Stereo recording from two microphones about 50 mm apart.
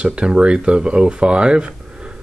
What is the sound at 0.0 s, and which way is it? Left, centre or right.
Speech, right.